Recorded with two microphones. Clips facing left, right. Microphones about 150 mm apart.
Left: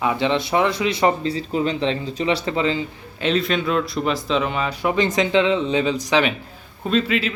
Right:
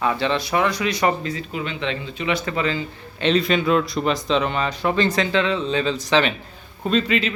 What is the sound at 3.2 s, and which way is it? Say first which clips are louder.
A man's voice: right 2 dB; centre (ahead or behind).